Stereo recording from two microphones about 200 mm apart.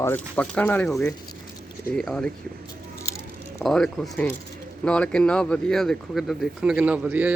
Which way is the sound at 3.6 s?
5° left (ahead or behind).